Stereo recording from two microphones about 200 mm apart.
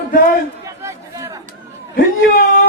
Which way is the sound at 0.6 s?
15° right (ahead or behind).